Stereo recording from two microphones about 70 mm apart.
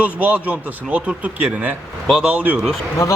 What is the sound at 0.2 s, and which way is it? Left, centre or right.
Speech, right.